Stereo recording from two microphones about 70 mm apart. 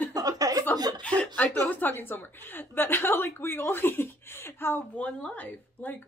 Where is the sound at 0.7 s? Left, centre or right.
Right.